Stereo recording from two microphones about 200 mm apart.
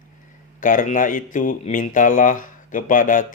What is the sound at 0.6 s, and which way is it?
Speech, 40° left (ahead or behind).